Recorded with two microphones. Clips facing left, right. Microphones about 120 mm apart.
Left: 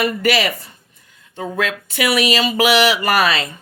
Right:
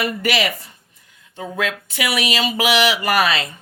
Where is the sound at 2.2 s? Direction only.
40° left (ahead or behind).